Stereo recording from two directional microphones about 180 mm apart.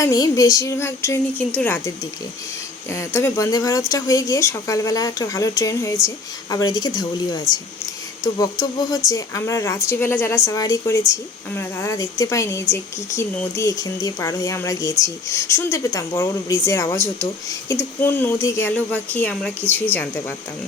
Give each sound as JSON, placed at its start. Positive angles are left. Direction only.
{"t": 0.0, "sound": "speech", "side_deg": 20}
{"t": 2.9, "sound": "speech", "side_deg": 15}
{"t": 9.0, "sound": "speech", "side_deg": 20}